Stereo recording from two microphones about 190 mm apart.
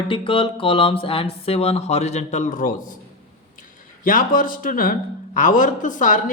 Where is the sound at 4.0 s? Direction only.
45° left (ahead or behind).